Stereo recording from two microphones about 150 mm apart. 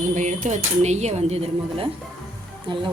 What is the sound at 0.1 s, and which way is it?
Speech, 55° right (ahead or behind).